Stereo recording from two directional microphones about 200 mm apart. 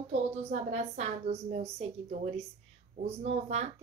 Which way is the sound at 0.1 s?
35° right (ahead or behind).